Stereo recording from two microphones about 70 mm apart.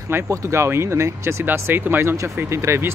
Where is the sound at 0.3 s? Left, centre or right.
Right.